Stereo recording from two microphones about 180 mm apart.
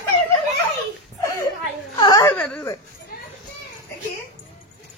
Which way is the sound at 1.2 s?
20° left (ahead or behind).